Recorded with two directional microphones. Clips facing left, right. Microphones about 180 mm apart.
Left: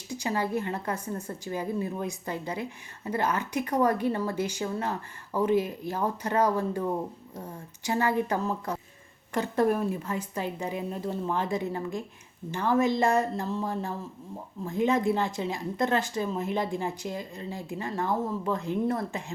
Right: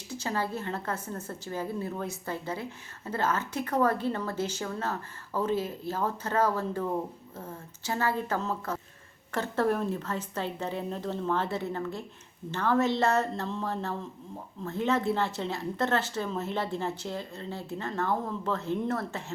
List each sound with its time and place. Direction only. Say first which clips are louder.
0.1 s a woman's voice: left 3 dB; 15° left (ahead or behind)